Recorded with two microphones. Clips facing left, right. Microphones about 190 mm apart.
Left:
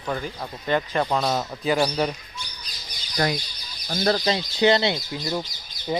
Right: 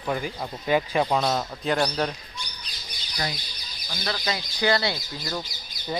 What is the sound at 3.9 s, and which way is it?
A man's voice, 40° left (ahead or behind).